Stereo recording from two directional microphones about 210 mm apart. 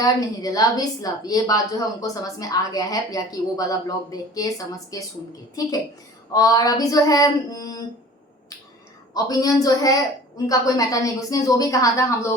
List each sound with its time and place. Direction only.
0.0 s a woman's voice: 15° left (ahead or behind)
6.3 s a woman's voice: 15° left (ahead or behind)
9.1 s a woman's voice: 15° left (ahead or behind)